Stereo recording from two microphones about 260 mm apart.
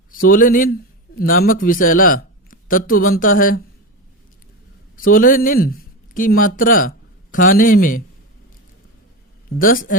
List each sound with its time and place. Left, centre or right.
0.1 s a man's voice: left
4.9 s speech: left
9.6 s a man's voice: left